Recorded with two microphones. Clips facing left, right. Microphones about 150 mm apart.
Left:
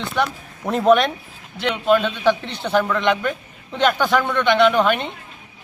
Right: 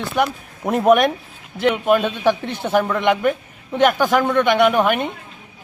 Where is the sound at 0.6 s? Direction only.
15° right (ahead or behind).